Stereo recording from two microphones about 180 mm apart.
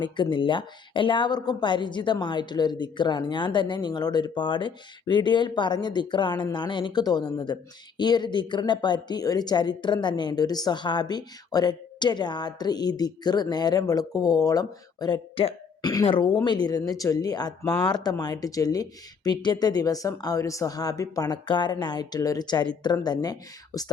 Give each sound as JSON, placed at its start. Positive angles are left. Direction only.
{"t": 0.0, "sound": "a woman's voice", "side_deg": 25}